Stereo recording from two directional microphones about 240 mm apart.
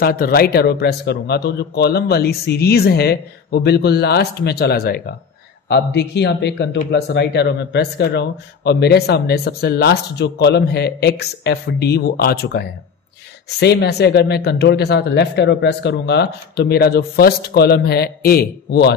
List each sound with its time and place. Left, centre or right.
0.0 s speech: left